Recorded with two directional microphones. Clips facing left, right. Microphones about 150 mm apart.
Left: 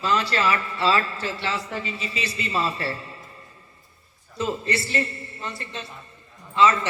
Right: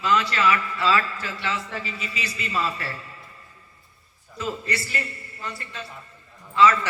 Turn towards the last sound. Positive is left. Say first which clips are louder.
# right 1 dB
turn(degrees=25)  # may be behind; listen again after turning